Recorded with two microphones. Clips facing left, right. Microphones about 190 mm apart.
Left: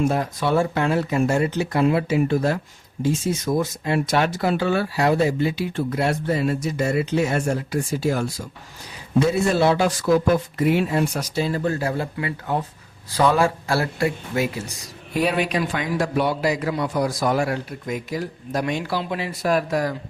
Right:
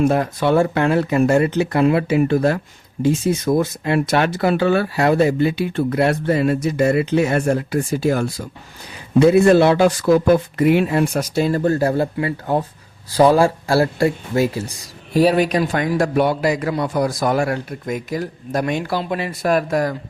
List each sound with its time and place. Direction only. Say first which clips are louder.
0.0 s a man's voice: right 5 dB; 60° right (ahead or behind)